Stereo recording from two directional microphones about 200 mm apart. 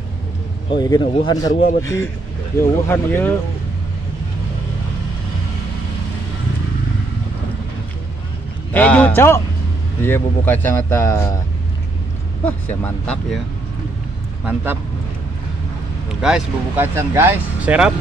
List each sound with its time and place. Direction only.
0.7 s a man's voice: 20° left (ahead or behind)
1.5 s a man's voice: 40° left (ahead or behind)
1.8 s speech: 15° left (ahead or behind)
8.7 s speech: 10° left (ahead or behind)
12.4 s speech: 10° left (ahead or behind)
14.4 s speech: 10° right (ahead or behind)
16.2 s speech: 5° right (ahead or behind)